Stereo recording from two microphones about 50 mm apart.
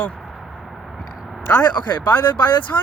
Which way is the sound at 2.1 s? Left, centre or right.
Left.